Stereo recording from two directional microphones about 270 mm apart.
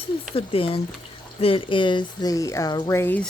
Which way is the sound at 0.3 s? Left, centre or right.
Left.